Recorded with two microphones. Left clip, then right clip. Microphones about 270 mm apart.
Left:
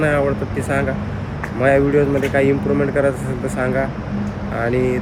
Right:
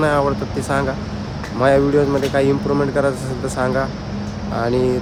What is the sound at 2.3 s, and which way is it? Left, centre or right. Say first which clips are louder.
Speech: even; centre.